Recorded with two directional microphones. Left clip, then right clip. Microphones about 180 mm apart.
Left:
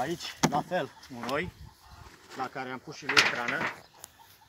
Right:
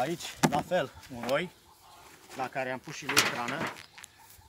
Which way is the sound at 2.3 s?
45° right (ahead or behind).